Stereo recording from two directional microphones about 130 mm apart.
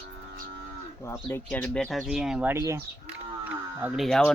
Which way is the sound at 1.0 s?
20° left (ahead or behind).